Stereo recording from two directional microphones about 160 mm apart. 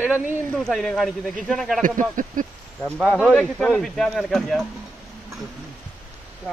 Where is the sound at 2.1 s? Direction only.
55° right (ahead or behind).